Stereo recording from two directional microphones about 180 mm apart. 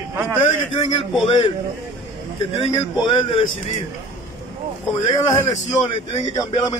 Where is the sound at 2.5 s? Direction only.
30° left (ahead or behind).